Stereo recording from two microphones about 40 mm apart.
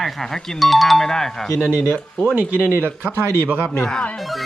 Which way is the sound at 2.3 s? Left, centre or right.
Right.